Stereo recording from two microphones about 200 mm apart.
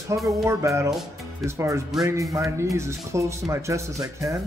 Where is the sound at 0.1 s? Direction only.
15° right (ahead or behind).